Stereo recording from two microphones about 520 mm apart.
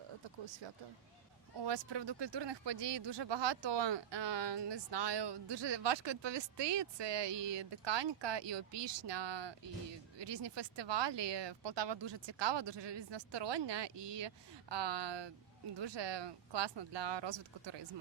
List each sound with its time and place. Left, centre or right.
0.4 s speech: right